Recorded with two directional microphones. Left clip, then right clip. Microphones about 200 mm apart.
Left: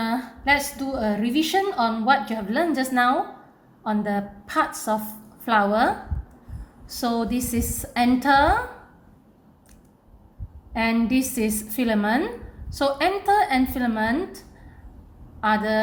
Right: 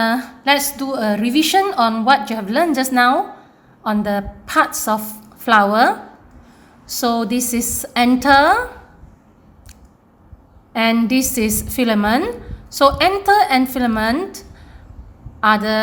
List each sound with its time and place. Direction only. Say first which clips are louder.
0.0 s a woman's voice: right 8 dB; 25° right (ahead or behind)
10.7 s a woman's voice: right 7 dB; 25° right (ahead or behind)